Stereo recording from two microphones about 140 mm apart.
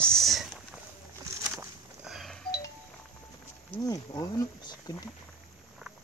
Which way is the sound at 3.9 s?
25° left (ahead or behind).